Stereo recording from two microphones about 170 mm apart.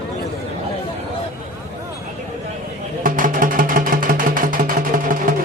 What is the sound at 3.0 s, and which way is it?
Music, 55° right (ahead or behind).